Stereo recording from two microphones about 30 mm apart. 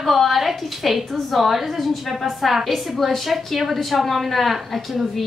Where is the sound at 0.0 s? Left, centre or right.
Centre.